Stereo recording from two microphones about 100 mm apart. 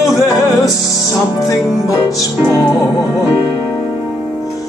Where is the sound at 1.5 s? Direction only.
35° left (ahead or behind).